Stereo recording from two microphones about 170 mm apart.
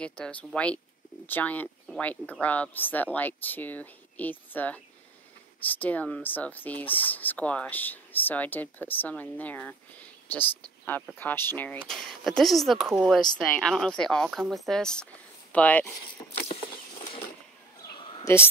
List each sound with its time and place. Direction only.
0.0 s speech: 5° left (ahead or behind)
16.5 s a sound: 30° left (ahead or behind)
18.2 s speech: 15° left (ahead or behind)